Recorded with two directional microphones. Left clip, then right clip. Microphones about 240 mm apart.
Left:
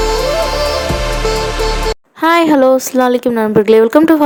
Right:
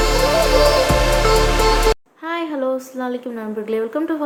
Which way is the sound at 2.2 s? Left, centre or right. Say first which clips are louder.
Left 14 dB; left.